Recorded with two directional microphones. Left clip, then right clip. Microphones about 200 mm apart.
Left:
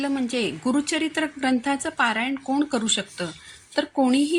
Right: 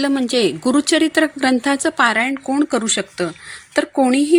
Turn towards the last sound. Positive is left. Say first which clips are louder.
# right 6 dB
turn(degrees=-35)  # may be behind; listen again after turning